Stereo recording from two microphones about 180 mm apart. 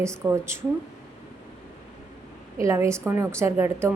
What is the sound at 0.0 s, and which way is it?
Speech, 15° right (ahead or behind).